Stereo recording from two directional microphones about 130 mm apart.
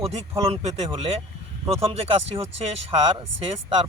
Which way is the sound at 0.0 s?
50° right (ahead or behind).